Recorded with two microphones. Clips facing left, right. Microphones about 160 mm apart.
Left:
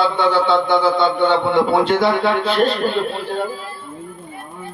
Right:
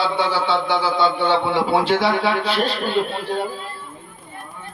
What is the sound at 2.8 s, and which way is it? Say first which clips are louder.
Speech: left 2 dB; 45° left (ahead or behind).